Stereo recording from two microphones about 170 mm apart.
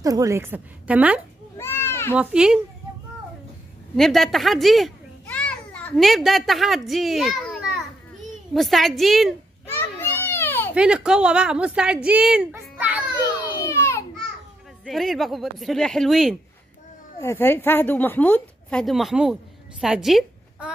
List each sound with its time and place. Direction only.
0.0 s a woman's voice: 20° right (ahead or behind)
1.6 s a sound: 15° left (ahead or behind)
2.1 s speech: 5° right (ahead or behind)
3.9 s a child's voice: centre (ahead or behind)
9.7 s children playing: 15° left (ahead or behind)
10.7 s a woman's voice: 5° right (ahead or behind)
13.7 s a sound: 15° left (ahead or behind)
14.9 s speech: centre (ahead or behind)
17.2 s a woman's voice: 15° left (ahead or behind); by 20.7 s 5° right (ahead or behind)